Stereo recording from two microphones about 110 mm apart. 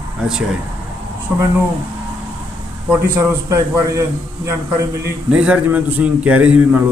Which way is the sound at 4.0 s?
30° right (ahead or behind).